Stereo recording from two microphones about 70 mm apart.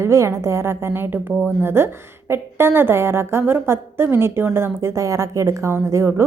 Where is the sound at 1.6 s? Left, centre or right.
Right.